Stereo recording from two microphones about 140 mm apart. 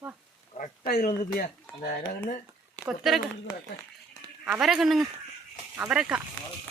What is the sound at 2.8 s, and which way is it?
Speech, centre (ahead or behind).